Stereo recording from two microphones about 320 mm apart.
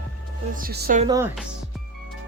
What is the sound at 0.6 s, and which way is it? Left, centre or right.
Speech, right.